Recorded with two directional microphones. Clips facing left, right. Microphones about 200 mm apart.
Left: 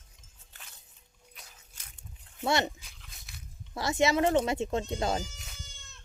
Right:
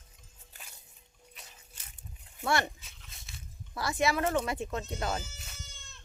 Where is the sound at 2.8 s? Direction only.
Centre (ahead or behind).